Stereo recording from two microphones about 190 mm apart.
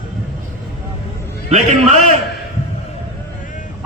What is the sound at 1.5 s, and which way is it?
Speech, 35° right (ahead or behind).